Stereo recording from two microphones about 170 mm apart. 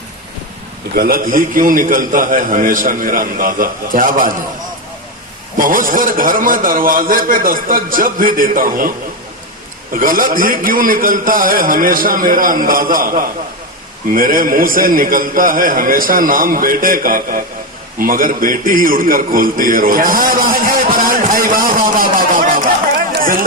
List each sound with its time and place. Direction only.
0.9 s a man's voice: 60° right (ahead or behind)
5.5 s a man's voice: 55° right (ahead or behind)
9.9 s a man's voice: 55° right (ahead or behind)
18.0 s a sound: 55° right (ahead or behind)